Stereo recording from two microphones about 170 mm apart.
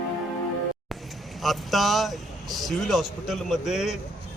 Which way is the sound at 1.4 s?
Centre (ahead or behind).